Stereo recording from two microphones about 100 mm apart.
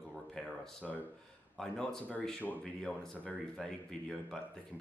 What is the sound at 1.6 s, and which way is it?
Speech, 5° left (ahead or behind).